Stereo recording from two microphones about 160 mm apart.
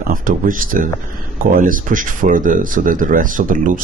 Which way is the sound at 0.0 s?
60° right (ahead or behind).